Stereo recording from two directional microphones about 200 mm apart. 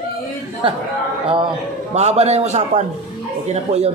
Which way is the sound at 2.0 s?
35° right (ahead or behind).